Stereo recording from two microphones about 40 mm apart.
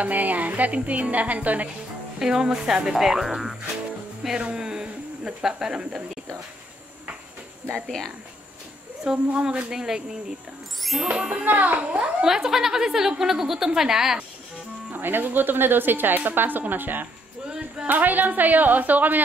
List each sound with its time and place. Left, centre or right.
0.0 s a woman's voice: right
2.1 s a woman's voice: centre
2.9 s a woman's voice: centre
4.4 s speech: right
7.7 s speech: centre
9.0 s speech: right
10.8 s music: centre
11.1 s speech: centre
11.4 s a woman's voice: right
12.2 s a woman's voice: centre
14.9 s a woman's voice: right